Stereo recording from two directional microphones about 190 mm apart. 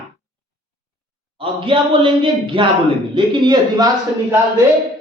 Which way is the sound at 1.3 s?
25° right (ahead or behind).